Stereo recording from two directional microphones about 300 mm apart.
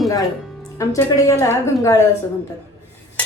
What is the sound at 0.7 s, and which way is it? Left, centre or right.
A woman's voice, centre.